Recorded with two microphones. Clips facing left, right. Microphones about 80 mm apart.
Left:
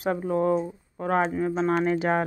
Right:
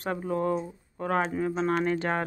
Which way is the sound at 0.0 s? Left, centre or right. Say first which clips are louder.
Left 4 dB; centre.